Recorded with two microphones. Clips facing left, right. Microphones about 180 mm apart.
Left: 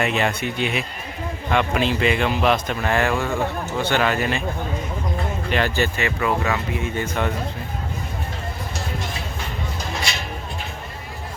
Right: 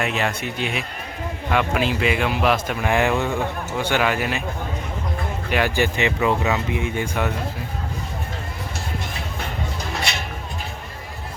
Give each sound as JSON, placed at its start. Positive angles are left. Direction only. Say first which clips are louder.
{"t": 0.0, "sound": "speech", "louder": "left 2 dB", "side_deg": 0}
{"t": 5.5, "sound": "speech", "louder": "right 2 dB", "side_deg": -10}